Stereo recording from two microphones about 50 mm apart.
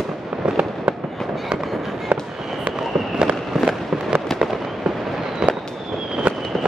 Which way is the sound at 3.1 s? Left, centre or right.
Centre.